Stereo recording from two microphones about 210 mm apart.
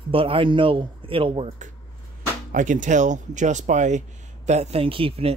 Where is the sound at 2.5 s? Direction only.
40° right (ahead or behind).